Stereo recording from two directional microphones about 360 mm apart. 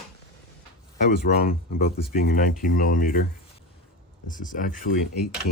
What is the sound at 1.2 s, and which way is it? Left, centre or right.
Speech, left.